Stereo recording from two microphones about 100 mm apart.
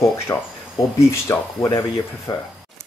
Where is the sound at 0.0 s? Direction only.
35° left (ahead or behind).